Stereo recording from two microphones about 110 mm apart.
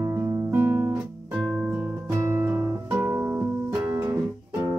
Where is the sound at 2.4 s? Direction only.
15° right (ahead or behind).